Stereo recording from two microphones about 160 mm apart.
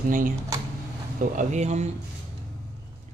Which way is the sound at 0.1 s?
55° right (ahead or behind).